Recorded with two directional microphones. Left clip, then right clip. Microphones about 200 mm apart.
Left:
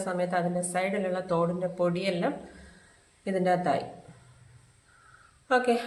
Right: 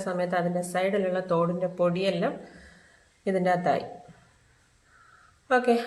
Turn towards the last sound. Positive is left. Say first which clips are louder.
# right 2 dB
turn(degrees=-10)  # may be behind; listen again after turning